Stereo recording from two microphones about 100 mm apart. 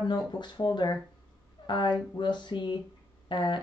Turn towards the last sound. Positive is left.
turn(degrees=50)  # may be behind; listen again after turning